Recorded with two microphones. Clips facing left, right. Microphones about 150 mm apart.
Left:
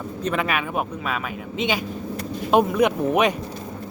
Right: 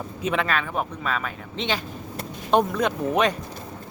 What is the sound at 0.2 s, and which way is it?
Speech, 5° right (ahead or behind).